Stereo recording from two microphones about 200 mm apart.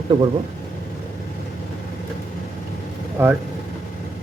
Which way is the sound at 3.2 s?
10° right (ahead or behind).